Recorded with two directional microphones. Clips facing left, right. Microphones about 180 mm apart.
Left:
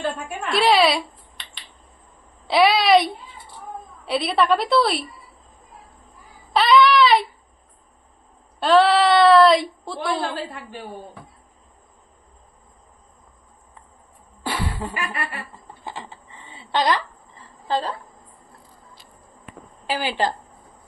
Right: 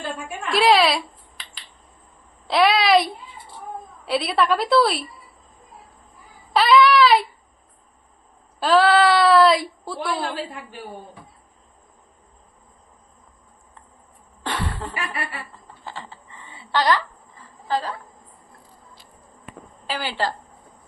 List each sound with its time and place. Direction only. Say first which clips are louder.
0.4 s a sound: even; centre (ahead or behind)
4.0 s speech: left 1 dB; centre (ahead or behind)
6.5 s child singing: even; centre (ahead or behind)
8.6 s speech: even; centre (ahead or behind)
14.4 s a sound: left 1 dB; 10° left (ahead or behind)
17.7 s a woman's voice: left 1 dB; 30° left (ahead or behind)
19.9 s a woman's voice: left 3 dB; 15° left (ahead or behind)